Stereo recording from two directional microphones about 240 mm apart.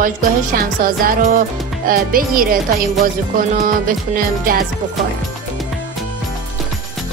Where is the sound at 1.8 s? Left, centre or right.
Right.